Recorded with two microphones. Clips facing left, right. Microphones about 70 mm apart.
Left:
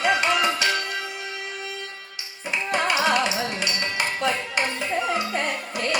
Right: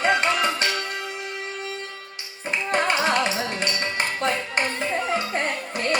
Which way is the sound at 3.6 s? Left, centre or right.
Right.